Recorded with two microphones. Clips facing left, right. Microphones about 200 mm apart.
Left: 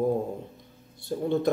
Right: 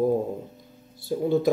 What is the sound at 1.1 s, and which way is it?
Speech, 5° right (ahead or behind).